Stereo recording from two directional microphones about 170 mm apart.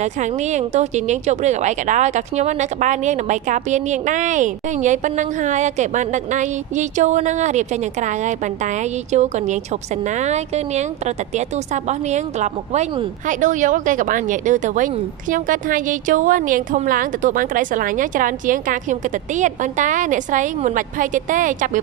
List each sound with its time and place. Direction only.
0.0 s a woman's voice: 45° right (ahead or behind)